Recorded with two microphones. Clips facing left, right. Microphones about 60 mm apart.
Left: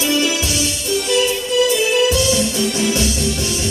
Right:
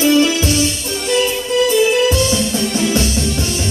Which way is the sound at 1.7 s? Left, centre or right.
Right.